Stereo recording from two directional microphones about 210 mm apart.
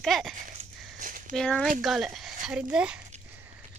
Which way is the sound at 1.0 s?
40° right (ahead or behind).